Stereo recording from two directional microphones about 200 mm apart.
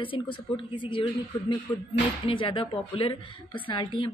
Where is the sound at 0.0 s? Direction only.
25° left (ahead or behind).